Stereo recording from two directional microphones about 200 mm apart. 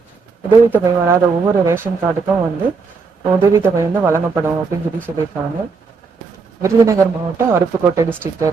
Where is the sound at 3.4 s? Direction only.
15° right (ahead or behind).